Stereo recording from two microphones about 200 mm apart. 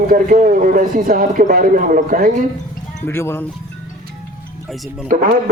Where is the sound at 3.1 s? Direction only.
10° left (ahead or behind).